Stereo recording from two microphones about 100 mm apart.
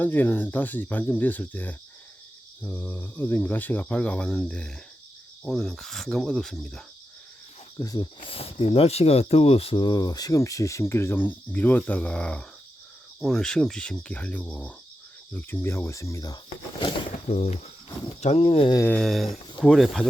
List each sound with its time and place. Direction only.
0.0 s speech: 20° left (ahead or behind)
5.5 s cricket: 5° left (ahead or behind)
7.8 s speech: 35° left (ahead or behind)
8.2 s speech: 70° left (ahead or behind)
9.7 s speech: 45° left (ahead or behind)
17.2 s speech: 90° left; by 18.7 s 70° left (ahead or behind)
19.0 s cricket: centre (ahead or behind)